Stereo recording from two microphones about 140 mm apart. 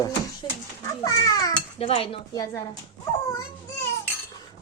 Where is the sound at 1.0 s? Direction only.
25° left (ahead or behind).